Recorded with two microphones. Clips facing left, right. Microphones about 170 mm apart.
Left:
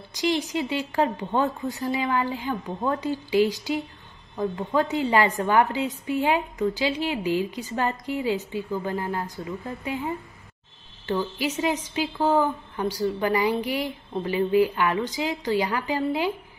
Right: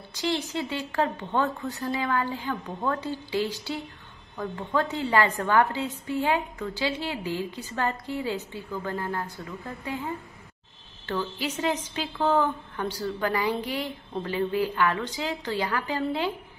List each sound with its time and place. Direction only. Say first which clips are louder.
0.1 s a woman's voice: left 4 dB; 15° left (ahead or behind)